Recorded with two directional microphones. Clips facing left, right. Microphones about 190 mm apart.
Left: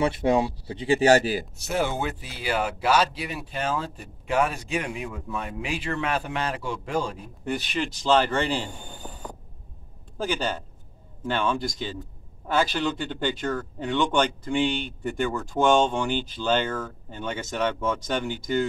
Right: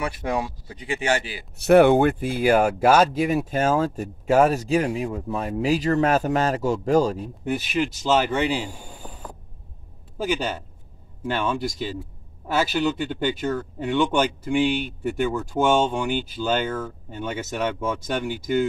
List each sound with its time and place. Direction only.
0.0 s speech: 25° left (ahead or behind); by 1.5 s 40° left (ahead or behind)
1.6 s speech: 65° right (ahead or behind); by 7.2 s 40° right (ahead or behind)
7.4 s a man's voice: 5° right (ahead or behind)